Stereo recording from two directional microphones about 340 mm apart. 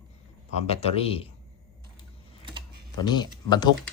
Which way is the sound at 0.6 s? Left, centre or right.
Centre.